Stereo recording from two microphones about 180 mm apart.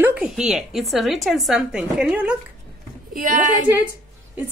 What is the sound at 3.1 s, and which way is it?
Speech, 50° right (ahead or behind).